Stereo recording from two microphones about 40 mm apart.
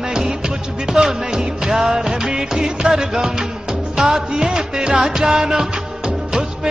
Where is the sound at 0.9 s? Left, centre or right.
Centre.